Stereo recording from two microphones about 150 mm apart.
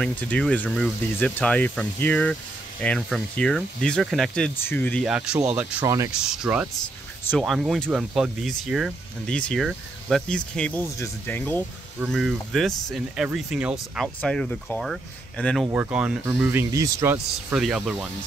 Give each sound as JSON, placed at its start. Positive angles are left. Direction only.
{"t": 0.0, "sound": "speech", "side_deg": 5}
{"t": 4.6, "sound": "speech", "side_deg": 15}
{"t": 5.0, "sound": "speech", "side_deg": -5}
{"t": 5.9, "sound": "speech", "side_deg": -20}
{"t": 6.2, "sound": "speech", "side_deg": -5}
{"t": 12.1, "sound": "speech", "side_deg": 0}
{"t": 14.0, "sound": "speech", "side_deg": 5}
{"t": 15.6, "sound": "speech", "side_deg": -10}
{"t": 17.6, "sound": "speech", "side_deg": 0}